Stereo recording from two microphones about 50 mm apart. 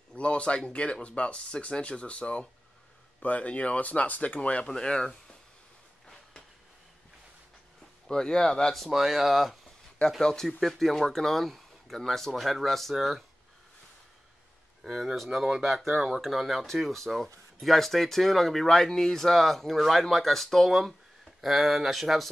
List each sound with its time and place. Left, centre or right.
0.1 s speech: left
4.6 s speech: centre
8.1 s speech: centre
8.8 s speech: centre
10.2 s speech: centre
14.8 s speech: centre